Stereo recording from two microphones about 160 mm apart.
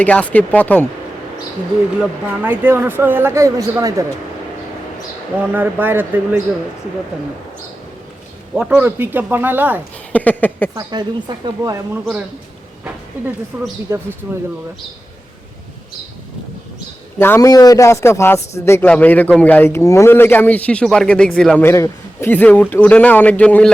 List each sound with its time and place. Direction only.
0.0 s a man's voice: 10° left (ahead or behind)
2.0 s speech: 10° right (ahead or behind)
5.4 s speech: 10° right (ahead or behind)
8.5 s speech: 10° right (ahead or behind)
10.1 s a man's voice: 10° left (ahead or behind)
10.8 s speech: 25° right (ahead or behind)
13.5 s speech: 10° right (ahead or behind)
17.2 s a man's voice: 15° left (ahead or behind)